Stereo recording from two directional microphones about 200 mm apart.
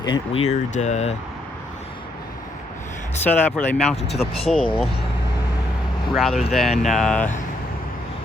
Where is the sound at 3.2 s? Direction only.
5° left (ahead or behind).